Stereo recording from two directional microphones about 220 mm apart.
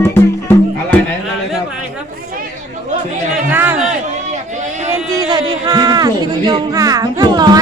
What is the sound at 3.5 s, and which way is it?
Speech, 10° right (ahead or behind).